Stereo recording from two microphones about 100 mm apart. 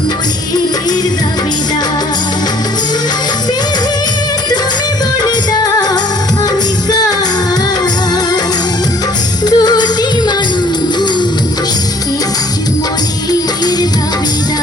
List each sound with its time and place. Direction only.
9.5 s music: 45° left (ahead or behind)